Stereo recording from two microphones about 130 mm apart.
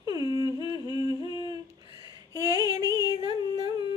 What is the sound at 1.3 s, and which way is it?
Humming, 35° left (ahead or behind).